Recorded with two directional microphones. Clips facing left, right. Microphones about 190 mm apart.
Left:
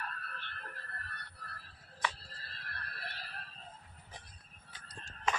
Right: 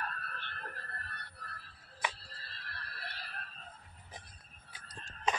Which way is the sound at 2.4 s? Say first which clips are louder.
Left 1 dB; 50° left (ahead or behind).